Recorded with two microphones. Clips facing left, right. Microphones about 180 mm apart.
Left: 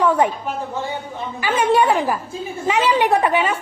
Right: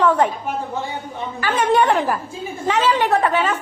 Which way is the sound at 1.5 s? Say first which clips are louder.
Even; 10° left (ahead or behind).